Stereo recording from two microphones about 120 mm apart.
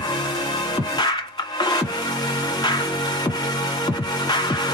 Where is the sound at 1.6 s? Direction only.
35° left (ahead or behind).